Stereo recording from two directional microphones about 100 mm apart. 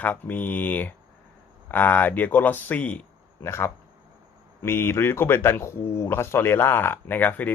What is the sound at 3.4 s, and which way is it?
Speech, 25° left (ahead or behind).